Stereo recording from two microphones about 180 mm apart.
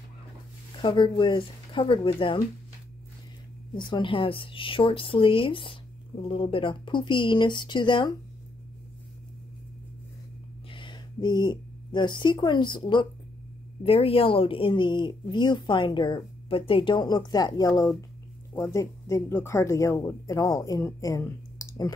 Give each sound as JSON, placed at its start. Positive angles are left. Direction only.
{"t": 0.8, "sound": "speech", "side_deg": 25}
{"t": 3.7, "sound": "speech", "side_deg": 25}
{"t": 10.7, "sound": "a woman's voice", "side_deg": 25}